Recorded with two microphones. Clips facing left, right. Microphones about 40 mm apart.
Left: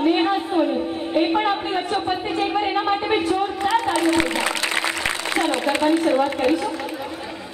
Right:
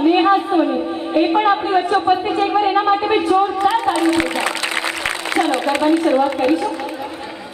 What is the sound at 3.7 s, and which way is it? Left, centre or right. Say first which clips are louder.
Speech: right 3 dB; centre.